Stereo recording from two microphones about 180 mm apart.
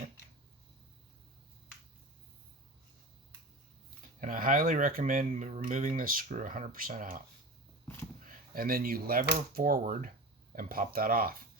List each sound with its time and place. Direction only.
4.2 s speech: 50° right (ahead or behind)
8.2 s speech: 50° right (ahead or behind)